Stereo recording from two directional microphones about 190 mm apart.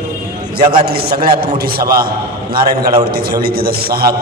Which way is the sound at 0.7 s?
55° right (ahead or behind).